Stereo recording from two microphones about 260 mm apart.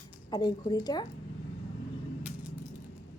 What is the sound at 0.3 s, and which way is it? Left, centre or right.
Speech, centre.